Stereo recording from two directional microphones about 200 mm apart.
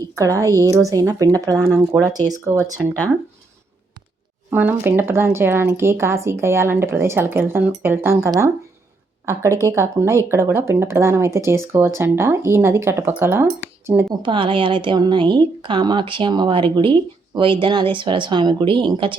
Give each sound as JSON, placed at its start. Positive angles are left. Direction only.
{"t": 0.2, "sound": "speech", "side_deg": -15}
{"t": 4.5, "sound": "speech", "side_deg": -10}
{"t": 14.2, "sound": "a woman's voice", "side_deg": -25}